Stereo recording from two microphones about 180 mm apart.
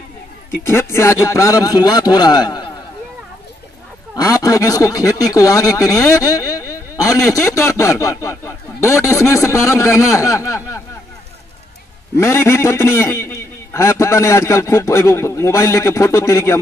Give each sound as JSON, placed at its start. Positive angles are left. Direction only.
{"t": 0.7, "sound": "speech", "side_deg": 15}
{"t": 4.1, "sound": "speech", "side_deg": 20}
{"t": 12.2, "sound": "speech", "side_deg": 15}